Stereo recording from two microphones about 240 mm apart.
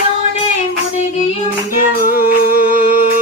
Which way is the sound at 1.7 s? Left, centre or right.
Right.